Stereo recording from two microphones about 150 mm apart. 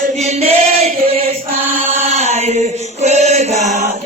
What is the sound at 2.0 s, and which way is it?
Chant, 50° right (ahead or behind).